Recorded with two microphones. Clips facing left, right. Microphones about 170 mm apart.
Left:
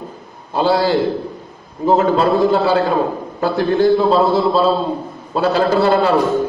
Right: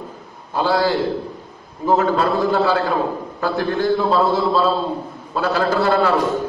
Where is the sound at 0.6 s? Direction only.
25° left (ahead or behind).